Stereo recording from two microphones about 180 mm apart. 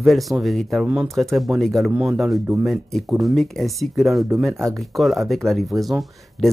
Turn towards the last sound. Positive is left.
turn(degrees=0)  # may be behind; listen again after turning